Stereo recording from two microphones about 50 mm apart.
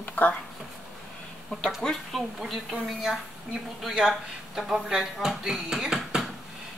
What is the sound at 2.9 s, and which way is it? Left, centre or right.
Speech, centre.